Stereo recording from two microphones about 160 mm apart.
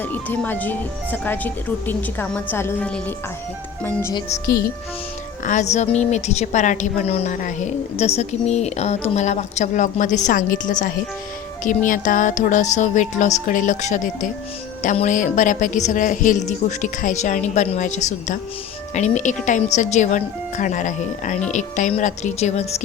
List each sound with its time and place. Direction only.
0.0 s speech: 10° left (ahead or behind)
4.4 s speech: 20° left (ahead or behind)
5.5 s a woman's voice: 50° left (ahead or behind)